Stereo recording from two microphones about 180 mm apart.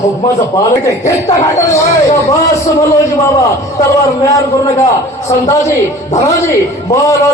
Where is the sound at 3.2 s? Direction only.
20° left (ahead or behind).